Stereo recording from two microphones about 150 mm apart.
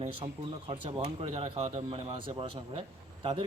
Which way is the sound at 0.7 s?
45° right (ahead or behind).